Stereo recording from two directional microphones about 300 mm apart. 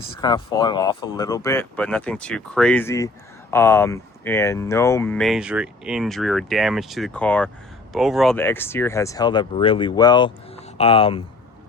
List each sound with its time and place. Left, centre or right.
0.2 s speech: centre